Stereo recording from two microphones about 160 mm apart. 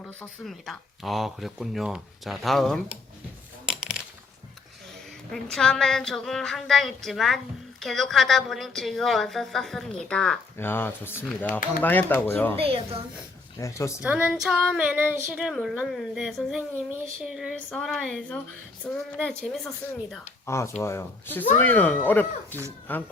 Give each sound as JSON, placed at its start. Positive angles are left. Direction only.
{"t": 0.2, "sound": "a woman's voice", "side_deg": 0}
{"t": 5.3, "sound": "a woman's voice", "side_deg": 5}
{"t": 12.5, "sound": "a woman's voice", "side_deg": -35}
{"t": 13.6, "sound": "speech", "side_deg": 20}
{"t": 14.0, "sound": "a woman's voice", "side_deg": -5}
{"t": 20.5, "sound": "speech", "side_deg": 15}